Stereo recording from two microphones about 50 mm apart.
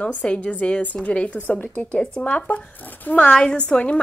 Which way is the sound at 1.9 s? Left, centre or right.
Left.